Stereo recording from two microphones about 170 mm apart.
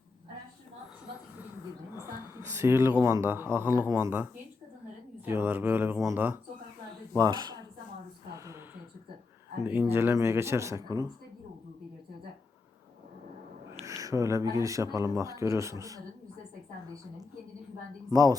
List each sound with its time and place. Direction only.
2.0 s a sound: 15° right (ahead or behind)
3.0 s speech: 15° right (ahead or behind)
7.2 s speech: 25° right (ahead or behind)
9.6 s speech: 10° right (ahead or behind)
13.8 s speech: 20° right (ahead or behind)
18.1 s speech: 20° right (ahead or behind)